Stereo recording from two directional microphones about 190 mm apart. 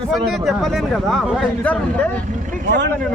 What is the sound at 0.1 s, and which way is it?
A man's voice, centre (ahead or behind).